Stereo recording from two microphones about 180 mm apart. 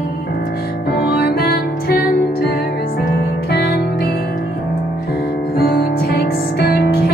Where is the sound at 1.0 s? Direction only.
60° left (ahead or behind).